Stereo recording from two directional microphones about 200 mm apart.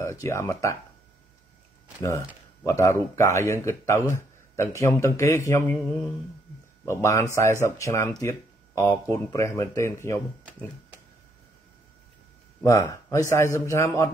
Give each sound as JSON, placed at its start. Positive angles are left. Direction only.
{"t": 0.0, "sound": "speech", "side_deg": 15}
{"t": 2.0, "sound": "speech", "side_deg": 15}
{"t": 6.8, "sound": "speech", "side_deg": 15}
{"t": 12.6, "sound": "speech", "side_deg": 15}